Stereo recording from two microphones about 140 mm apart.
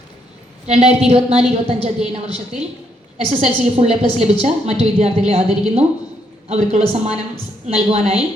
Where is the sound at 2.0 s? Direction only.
45° right (ahead or behind).